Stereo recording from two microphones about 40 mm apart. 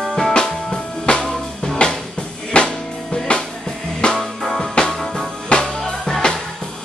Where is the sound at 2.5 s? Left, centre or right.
Left.